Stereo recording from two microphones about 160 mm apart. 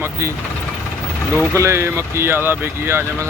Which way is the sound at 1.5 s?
15° right (ahead or behind).